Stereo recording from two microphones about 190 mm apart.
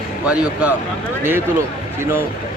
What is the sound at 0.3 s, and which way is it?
Speech, 5° right (ahead or behind).